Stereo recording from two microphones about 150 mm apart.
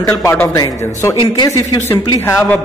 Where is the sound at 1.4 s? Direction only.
25° left (ahead or behind).